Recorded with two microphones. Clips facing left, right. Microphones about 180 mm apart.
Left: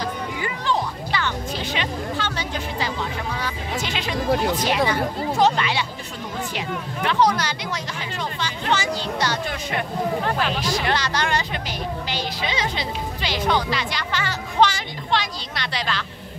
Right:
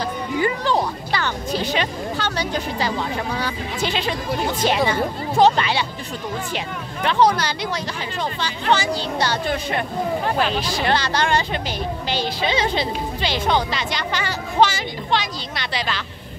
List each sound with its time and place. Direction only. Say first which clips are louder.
0.4 s music: right 5 dB; 35° right (ahead or behind)
4.5 s a woman's voice: right 1 dB; 25° right (ahead or behind)
7.1 s a woman's voice: right 3 dB; 30° right (ahead or behind)
14.6 s a woman's voice: right 1 dB; 5° right (ahead or behind)